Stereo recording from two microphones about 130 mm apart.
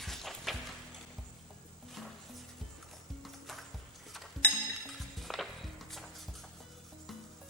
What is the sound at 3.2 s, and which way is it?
Music, centre (ahead or behind).